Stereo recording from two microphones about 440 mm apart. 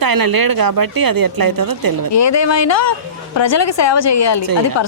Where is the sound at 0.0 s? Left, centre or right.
Right.